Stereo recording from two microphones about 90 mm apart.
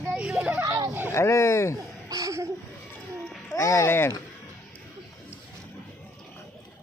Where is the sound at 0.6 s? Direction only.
45° right (ahead or behind).